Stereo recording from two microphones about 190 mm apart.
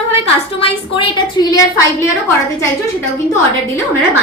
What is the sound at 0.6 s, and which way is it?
A woman's voice, 30° left (ahead or behind).